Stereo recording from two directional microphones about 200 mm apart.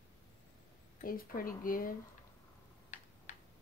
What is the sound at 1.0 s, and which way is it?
Speech, 45° left (ahead or behind).